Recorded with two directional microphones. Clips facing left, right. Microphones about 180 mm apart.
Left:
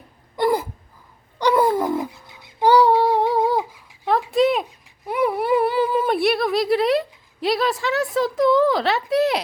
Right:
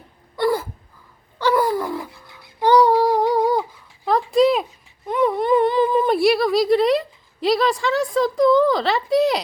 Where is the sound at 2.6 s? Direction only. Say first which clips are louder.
Even; 5° left (ahead or behind).